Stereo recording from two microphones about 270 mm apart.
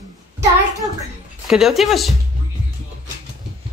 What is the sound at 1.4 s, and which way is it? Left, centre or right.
Speech, centre.